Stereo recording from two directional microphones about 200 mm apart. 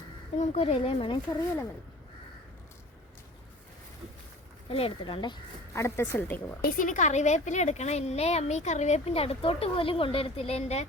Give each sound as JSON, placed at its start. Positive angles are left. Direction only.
{"t": 0.3, "sound": "speech", "side_deg": 30}
{"t": 4.7, "sound": "speech", "side_deg": 25}
{"t": 6.6, "sound": "a woman's voice", "side_deg": 45}